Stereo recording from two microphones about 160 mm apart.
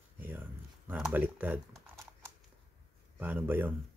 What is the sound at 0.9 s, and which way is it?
Speech, 5° right (ahead or behind).